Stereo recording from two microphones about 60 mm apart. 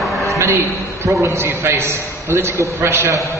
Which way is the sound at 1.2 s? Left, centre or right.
Right.